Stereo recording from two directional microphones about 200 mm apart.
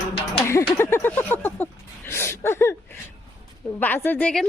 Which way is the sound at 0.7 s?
10° left (ahead or behind).